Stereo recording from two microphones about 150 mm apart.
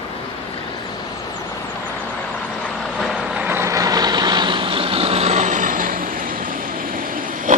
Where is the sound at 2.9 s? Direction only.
Centre (ahead or behind); by 6.1 s 65° right (ahead or behind).